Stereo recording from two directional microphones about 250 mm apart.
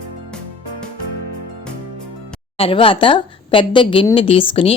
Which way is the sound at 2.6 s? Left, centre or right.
Left.